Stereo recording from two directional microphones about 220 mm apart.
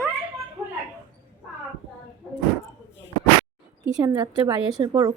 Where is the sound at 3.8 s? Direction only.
10° right (ahead or behind).